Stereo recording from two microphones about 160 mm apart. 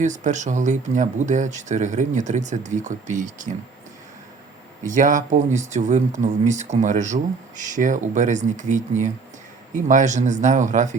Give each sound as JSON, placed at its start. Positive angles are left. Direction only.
{"t": 0.0, "sound": "speech", "side_deg": -50}
{"t": 4.9, "sound": "speech", "side_deg": -50}